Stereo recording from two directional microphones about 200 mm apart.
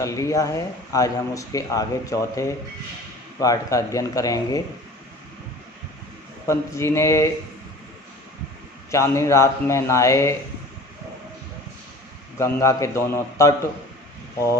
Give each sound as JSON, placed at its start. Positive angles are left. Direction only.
{"t": 0.0, "sound": "speech", "side_deg": 15}
{"t": 6.5, "sound": "speech", "side_deg": 15}
{"t": 8.9, "sound": "speech", "side_deg": 15}
{"t": 12.4, "sound": "speech", "side_deg": 15}